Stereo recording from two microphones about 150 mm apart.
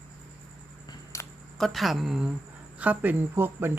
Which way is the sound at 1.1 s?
20° left (ahead or behind).